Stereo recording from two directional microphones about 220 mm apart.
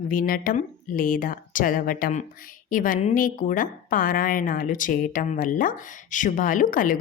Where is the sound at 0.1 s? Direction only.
40° left (ahead or behind).